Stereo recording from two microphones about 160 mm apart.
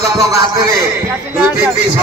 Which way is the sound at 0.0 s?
20° right (ahead or behind).